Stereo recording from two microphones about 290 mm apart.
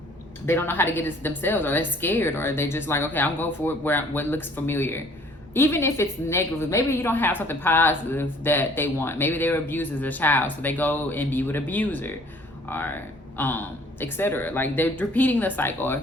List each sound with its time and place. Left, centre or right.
0.4 s a woman's voice: centre